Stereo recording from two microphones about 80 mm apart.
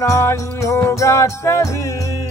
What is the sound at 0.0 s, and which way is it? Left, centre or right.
Music, left.